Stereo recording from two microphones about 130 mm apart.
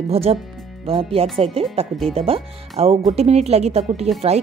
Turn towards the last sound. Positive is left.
turn(degrees=-55)  # may be behind; listen again after turning